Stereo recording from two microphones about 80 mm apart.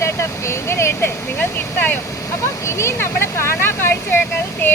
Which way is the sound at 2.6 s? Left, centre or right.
Left.